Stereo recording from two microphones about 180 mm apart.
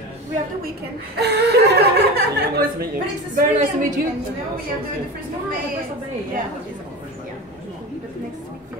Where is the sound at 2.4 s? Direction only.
60° right (ahead or behind).